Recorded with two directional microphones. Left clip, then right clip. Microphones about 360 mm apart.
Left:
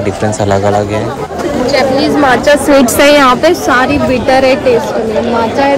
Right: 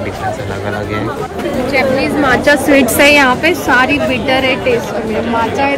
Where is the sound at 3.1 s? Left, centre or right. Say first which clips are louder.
Left 3 dB; centre.